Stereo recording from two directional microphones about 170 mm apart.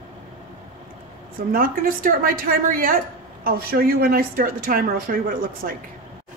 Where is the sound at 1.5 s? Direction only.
55° right (ahead or behind).